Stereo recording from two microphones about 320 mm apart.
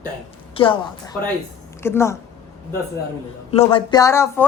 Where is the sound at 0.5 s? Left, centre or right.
Centre.